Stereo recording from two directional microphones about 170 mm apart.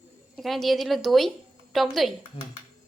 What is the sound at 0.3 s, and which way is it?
Speech, centre (ahead or behind).